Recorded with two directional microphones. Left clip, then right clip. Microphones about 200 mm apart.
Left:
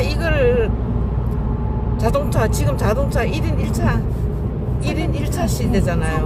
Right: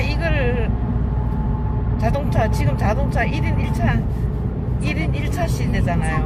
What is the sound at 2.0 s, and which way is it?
Speech, 15° left (ahead or behind).